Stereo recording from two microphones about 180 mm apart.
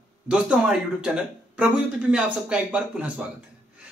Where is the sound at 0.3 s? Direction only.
5° right (ahead or behind).